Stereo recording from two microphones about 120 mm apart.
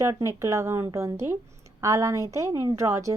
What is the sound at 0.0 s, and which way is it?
A woman's voice, 25° right (ahead or behind).